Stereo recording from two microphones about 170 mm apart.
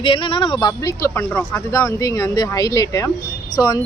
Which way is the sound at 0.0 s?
30° left (ahead or behind).